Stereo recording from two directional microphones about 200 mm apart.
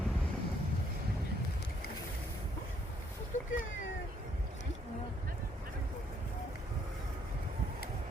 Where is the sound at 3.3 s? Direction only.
40° left (ahead or behind).